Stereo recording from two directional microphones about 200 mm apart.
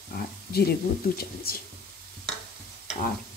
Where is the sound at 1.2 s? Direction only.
50° left (ahead or behind).